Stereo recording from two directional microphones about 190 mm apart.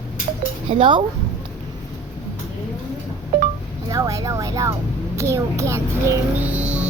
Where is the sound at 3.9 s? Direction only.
20° right (ahead or behind).